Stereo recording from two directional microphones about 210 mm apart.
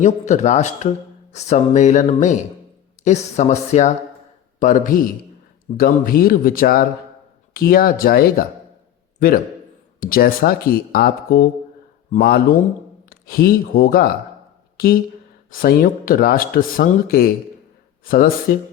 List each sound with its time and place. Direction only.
0.0 s speech: 35° left (ahead or behind)
10.0 s speech: 45° left (ahead or behind)